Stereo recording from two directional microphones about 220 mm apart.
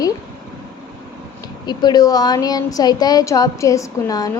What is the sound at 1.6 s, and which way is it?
A woman's voice, 20° left (ahead or behind).